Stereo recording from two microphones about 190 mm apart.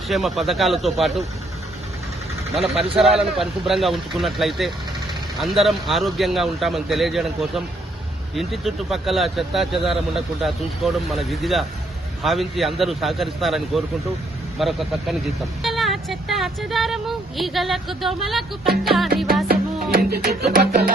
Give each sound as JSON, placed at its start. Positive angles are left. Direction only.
{"t": 0.1, "sound": "speech", "side_deg": 0}
{"t": 2.6, "sound": "speech", "side_deg": -30}
{"t": 3.0, "sound": "speech", "side_deg": 0}
{"t": 19.5, "sound": "music", "side_deg": -50}